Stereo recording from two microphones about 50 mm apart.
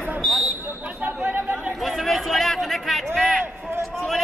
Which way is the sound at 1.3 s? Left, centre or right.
Right.